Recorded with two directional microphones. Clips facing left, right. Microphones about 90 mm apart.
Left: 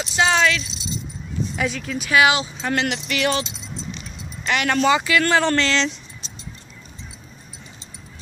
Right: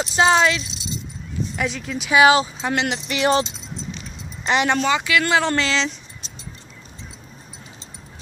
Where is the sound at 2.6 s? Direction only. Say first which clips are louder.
Even; 20° right (ahead or behind).